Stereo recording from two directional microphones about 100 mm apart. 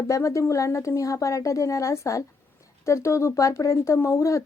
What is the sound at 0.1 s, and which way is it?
A woman's voice, 30° left (ahead or behind).